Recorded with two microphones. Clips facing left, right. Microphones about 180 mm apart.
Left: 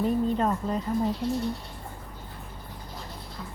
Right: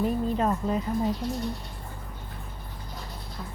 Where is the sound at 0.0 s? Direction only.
5° right (ahead or behind).